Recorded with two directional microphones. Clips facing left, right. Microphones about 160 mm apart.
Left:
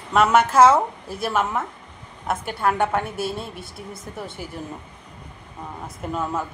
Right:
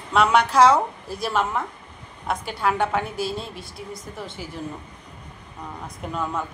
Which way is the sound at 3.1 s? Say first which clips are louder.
Even; 55° left (ahead or behind).